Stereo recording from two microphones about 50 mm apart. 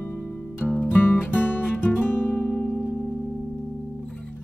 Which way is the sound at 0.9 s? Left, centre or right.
Left.